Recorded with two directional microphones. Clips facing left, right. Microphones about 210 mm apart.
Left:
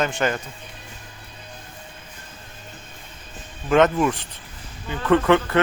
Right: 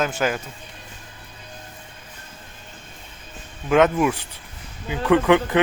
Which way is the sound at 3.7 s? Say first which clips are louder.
Even; 5° right (ahead or behind).